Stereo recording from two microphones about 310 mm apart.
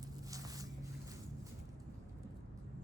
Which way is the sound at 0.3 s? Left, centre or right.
Centre.